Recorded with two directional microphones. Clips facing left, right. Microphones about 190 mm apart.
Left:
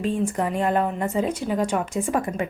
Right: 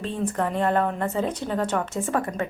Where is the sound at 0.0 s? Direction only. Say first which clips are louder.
Left 2 dB; 10° left (ahead or behind).